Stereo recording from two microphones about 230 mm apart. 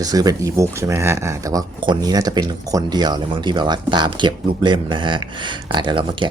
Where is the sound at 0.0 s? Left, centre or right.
Centre.